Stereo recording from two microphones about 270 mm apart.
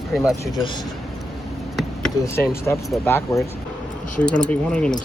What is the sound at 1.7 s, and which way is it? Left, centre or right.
Basketball bounce, centre.